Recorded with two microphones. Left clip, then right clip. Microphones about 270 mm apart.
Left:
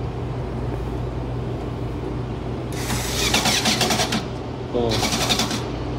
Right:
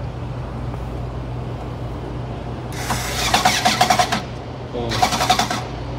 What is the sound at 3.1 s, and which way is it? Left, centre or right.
Printer, centre.